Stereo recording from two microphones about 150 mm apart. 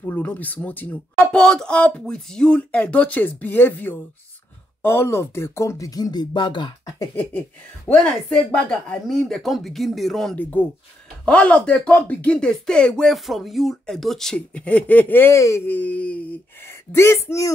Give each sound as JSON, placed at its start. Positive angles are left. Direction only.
{"t": 0.0, "sound": "speech", "side_deg": 10}
{"t": 7.2, "sound": "speech", "side_deg": 15}